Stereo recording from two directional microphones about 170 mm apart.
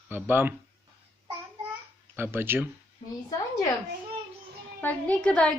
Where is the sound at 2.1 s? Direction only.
10° right (ahead or behind).